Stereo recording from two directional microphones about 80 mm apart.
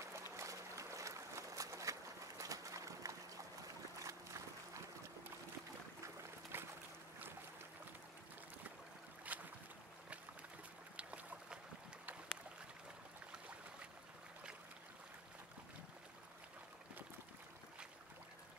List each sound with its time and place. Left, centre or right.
0.0 s a sound: right
4.0 s boat: right
6.5 s boat: right
9.3 s boat: centre
11.0 s boat: centre